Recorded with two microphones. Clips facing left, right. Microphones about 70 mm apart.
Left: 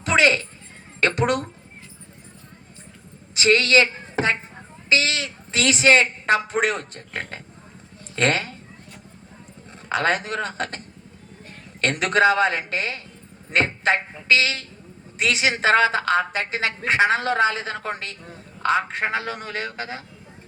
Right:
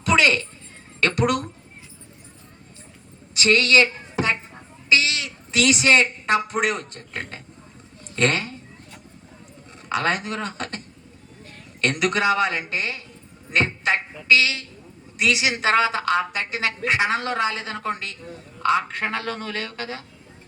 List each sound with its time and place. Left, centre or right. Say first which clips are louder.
0.0 s a sound: even; left
1.0 s a woman's voice: even; left
3.3 s a woman's voice: even; left
9.9 s a woman's voice: left 1 dB; left
11.8 s a woman's voice: left 3 dB; left